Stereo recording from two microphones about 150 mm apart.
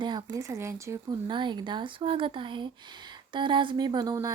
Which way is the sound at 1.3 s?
30° right (ahead or behind).